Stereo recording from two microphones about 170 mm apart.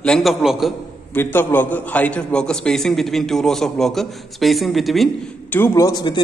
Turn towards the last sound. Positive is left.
turn(degrees=25)  # may be behind; listen again after turning